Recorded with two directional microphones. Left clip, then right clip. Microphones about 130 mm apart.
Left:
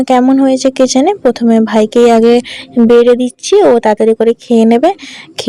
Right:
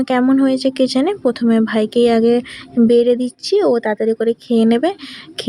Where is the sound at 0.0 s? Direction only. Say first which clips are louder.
Left 6 dB; 25° left (ahead or behind).